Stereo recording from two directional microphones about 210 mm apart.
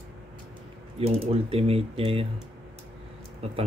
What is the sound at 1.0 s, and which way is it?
Speech, 25° right (ahead or behind).